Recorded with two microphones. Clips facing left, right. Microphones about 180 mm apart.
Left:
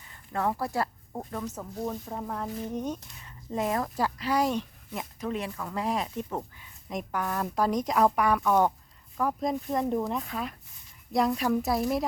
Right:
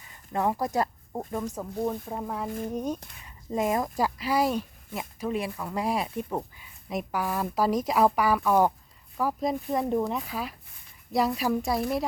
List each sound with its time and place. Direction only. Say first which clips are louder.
0.3 s speech: right 2 dB; 15° right (ahead or behind); by 12.0 s centre (ahead or behind)